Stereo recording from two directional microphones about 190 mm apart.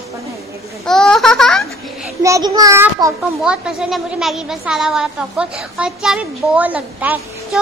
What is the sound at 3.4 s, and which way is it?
A woman's voice, 5° right (ahead or behind).